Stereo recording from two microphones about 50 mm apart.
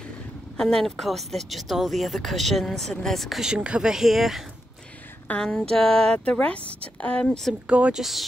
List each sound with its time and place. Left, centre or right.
0.6 s speech: centre
3.3 s speech: centre
3.9 s speech: centre
5.3 s speech: left
5.8 s speech: centre
7.2 s speech: centre
7.6 s speech: right
7.9 s speech: centre